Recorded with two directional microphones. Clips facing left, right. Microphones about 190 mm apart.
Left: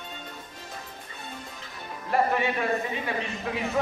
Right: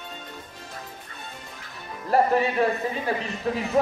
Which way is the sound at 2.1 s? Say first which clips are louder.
Right 4 dB; 35° right (ahead or behind).